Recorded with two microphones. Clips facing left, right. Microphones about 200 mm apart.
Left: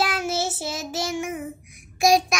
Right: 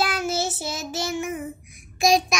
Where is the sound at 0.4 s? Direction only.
10° left (ahead or behind).